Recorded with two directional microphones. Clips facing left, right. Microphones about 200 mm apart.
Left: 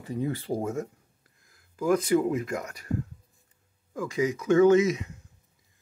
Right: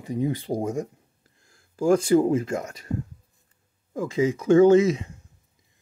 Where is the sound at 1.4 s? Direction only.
30° right (ahead or behind).